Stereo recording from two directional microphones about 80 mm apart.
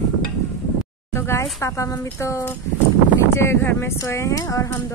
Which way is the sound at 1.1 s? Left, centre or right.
Left.